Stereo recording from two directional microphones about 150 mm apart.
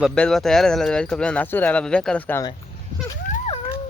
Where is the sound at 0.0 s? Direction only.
5° left (ahead or behind).